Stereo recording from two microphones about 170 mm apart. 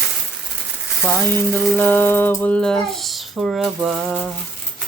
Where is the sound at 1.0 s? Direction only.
10° left (ahead or behind).